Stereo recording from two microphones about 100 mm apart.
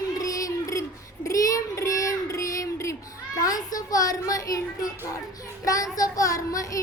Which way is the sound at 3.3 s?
40° left (ahead or behind).